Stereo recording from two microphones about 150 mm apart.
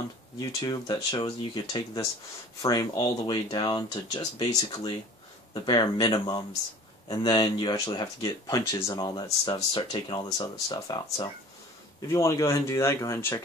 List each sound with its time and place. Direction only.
0.4 s speech: 25° left (ahead or behind)